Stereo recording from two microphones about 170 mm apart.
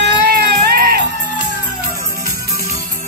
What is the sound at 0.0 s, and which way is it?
Music, 65° right (ahead or behind).